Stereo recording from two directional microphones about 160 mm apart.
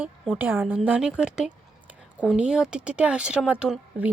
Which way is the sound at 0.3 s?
10° right (ahead or behind).